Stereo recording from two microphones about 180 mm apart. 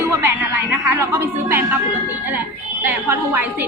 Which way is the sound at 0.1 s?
10° right (ahead or behind).